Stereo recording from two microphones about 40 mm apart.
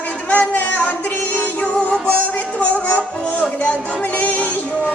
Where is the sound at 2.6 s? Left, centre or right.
Left.